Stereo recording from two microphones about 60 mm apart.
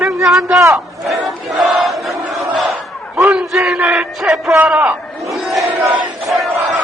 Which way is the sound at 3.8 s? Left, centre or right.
Right.